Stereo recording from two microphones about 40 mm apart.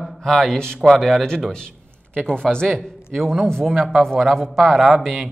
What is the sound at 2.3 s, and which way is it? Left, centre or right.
Speech, centre.